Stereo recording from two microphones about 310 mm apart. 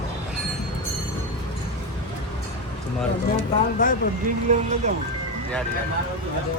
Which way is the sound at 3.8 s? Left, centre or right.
Left.